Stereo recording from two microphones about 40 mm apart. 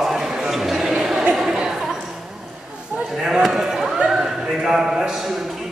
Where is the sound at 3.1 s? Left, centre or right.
Centre.